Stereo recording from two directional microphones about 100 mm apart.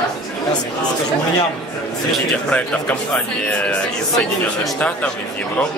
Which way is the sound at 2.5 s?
10° left (ahead or behind).